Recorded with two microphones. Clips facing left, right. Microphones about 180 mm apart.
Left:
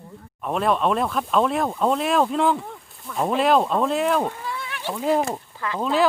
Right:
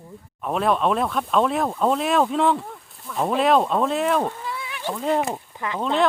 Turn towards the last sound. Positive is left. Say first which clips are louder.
# left 1 dB
turn(degrees=5)  # may be behind; listen again after turning